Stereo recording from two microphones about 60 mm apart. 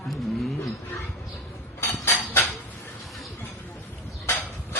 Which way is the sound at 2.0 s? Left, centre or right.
Left.